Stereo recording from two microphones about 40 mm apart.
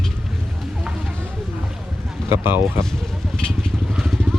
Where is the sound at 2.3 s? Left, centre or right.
Right.